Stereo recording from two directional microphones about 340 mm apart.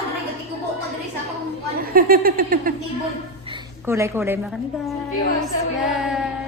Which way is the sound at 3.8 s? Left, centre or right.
Centre.